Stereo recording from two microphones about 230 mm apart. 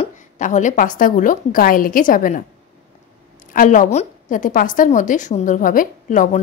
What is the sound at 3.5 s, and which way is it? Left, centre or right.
A woman's voice, left.